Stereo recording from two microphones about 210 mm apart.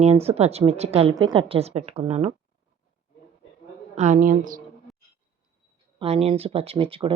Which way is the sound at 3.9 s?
35° right (ahead or behind).